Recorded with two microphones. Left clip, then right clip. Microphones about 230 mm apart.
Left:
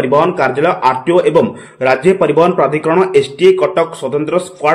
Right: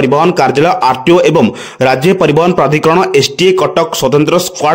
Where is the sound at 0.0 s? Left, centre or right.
Right.